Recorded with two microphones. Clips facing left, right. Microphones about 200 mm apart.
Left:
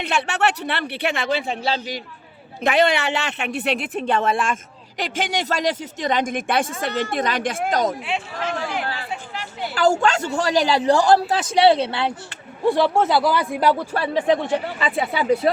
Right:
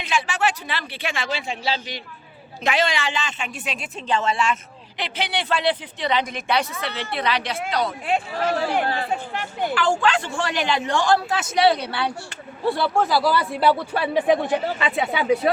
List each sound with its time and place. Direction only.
0.0 s speech: 60° left (ahead or behind); by 7.9 s 45° left (ahead or behind)
8.4 s a man's voice: 40° right (ahead or behind)
9.3 s a sound: 50° right (ahead or behind)
9.7 s a man's voice: 40° left (ahead or behind); by 13.8 s 10° left (ahead or behind)
14.8 s speech: centre (ahead or behind)